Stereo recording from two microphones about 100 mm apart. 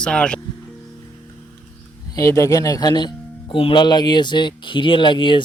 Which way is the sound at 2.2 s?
30° left (ahead or behind).